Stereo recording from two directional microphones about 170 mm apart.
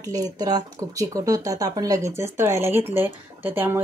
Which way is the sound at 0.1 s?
20° right (ahead or behind).